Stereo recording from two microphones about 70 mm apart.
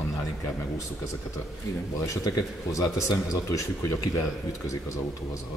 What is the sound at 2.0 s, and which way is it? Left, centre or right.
Speech, left.